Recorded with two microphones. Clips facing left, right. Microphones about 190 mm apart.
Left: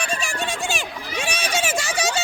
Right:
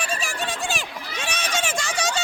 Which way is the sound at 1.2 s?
10° left (ahead or behind).